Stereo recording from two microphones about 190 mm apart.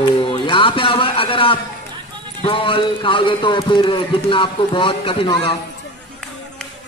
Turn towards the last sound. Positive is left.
turn(degrees=20)  # may be behind; listen again after turning